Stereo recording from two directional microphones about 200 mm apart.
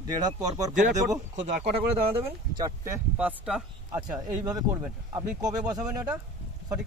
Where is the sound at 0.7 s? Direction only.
40° right (ahead or behind).